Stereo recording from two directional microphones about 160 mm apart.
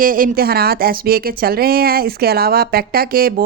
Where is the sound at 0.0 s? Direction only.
60° right (ahead or behind).